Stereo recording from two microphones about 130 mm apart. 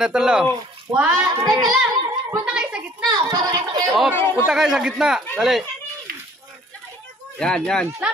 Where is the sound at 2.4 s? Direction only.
5° right (ahead or behind).